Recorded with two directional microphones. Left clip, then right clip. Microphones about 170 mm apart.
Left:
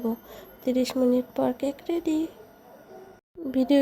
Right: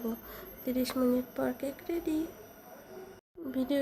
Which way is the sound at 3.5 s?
40° left (ahead or behind).